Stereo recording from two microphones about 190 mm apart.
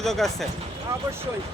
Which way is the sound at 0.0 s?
Centre (ahead or behind).